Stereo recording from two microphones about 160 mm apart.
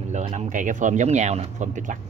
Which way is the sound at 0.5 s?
50° right (ahead or behind).